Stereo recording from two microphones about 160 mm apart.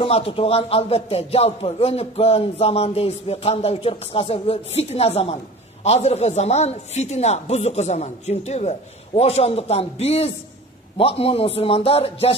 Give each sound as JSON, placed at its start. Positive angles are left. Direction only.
{"t": 0.0, "sound": "a man's voice", "side_deg": 35}